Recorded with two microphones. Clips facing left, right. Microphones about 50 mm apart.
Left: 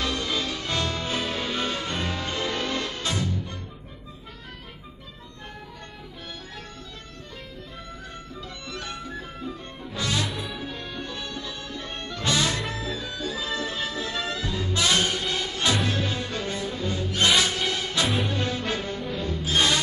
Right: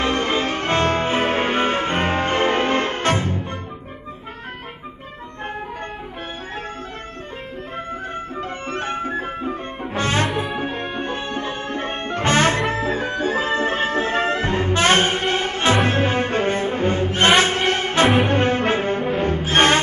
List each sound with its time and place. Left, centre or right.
0.0 s music: right
7.7 s music: right
10.2 s music: right
10.6 s music: right
18.0 s music: right
18.3 s music: right